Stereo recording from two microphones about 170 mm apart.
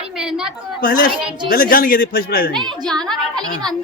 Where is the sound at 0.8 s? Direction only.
55° left (ahead or behind).